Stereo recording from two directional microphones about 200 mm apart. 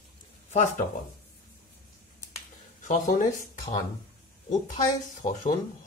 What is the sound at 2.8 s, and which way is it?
Speech, 40° left (ahead or behind).